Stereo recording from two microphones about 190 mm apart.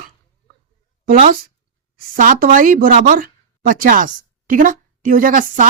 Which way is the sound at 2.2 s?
45° right (ahead or behind).